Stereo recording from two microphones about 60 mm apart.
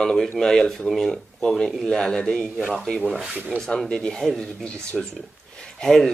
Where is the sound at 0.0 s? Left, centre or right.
Centre.